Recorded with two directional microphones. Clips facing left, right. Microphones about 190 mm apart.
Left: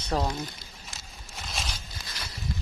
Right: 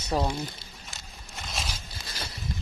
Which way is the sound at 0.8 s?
Centre (ahead or behind).